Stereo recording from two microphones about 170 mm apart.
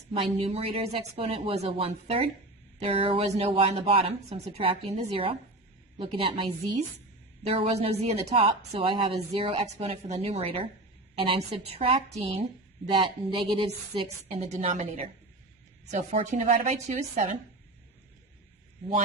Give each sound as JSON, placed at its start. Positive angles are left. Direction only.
{"t": 0.1, "sound": "speech", "side_deg": -35}